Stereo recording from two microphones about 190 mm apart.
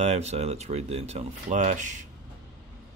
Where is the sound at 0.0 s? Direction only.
35° right (ahead or behind).